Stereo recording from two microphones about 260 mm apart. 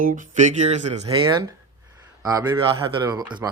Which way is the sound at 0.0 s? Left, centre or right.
Right.